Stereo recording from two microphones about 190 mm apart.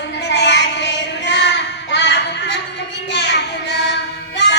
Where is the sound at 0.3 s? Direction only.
65° left (ahead or behind).